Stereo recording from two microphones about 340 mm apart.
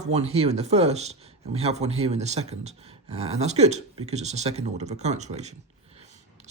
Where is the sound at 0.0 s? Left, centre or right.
Centre.